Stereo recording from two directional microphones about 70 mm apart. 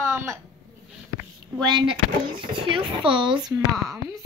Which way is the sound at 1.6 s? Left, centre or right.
Right.